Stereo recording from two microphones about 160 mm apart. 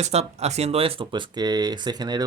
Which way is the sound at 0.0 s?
40° right (ahead or behind).